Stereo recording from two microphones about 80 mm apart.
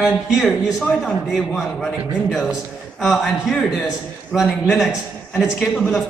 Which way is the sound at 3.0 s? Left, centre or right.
Centre.